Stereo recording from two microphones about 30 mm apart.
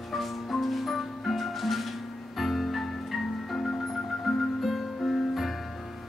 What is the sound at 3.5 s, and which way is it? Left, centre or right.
Music, left.